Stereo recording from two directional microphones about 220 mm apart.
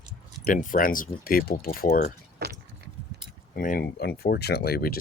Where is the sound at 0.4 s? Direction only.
35° left (ahead or behind).